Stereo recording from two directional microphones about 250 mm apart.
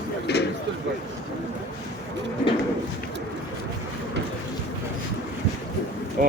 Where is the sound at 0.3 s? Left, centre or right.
Left.